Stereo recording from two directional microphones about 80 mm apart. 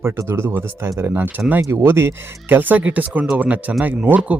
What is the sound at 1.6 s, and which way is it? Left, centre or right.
Speech, right.